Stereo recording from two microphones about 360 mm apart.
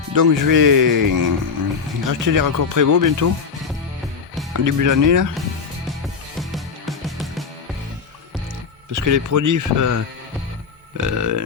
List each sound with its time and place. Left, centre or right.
0.1 s speech: right
4.5 s speech: right
6.4 s music: centre
8.9 s speech: right